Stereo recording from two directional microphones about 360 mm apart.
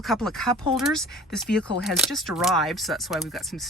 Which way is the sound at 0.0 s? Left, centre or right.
Centre.